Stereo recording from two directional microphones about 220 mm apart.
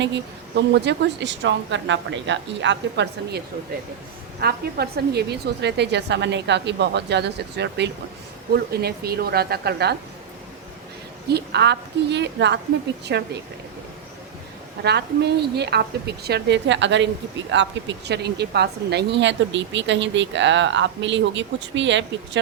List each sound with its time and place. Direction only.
0.0 s a woman's voice: 50° right (ahead or behind)
11.3 s a woman's voice: 50° right (ahead or behind)
14.8 s a woman's voice: 50° right (ahead or behind)